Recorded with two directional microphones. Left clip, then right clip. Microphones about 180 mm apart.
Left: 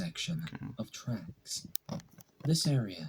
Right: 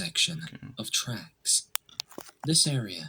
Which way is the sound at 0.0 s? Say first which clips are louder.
Right 12 dB; 15° right (ahead or behind).